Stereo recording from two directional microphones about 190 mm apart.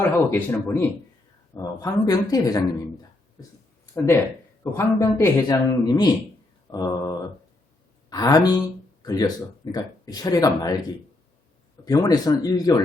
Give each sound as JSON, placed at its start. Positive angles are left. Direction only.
{"t": 0.0, "sound": "speech", "side_deg": 15}
{"t": 6.7, "sound": "mantra", "side_deg": 20}
{"t": 8.1, "sound": "speech", "side_deg": 20}
{"t": 11.9, "sound": "speech", "side_deg": 20}